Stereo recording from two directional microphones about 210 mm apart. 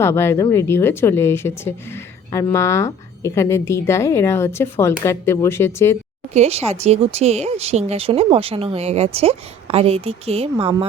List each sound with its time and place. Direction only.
0.0 s speech: 10° left (ahead or behind)
6.3 s speech: 30° right (ahead or behind)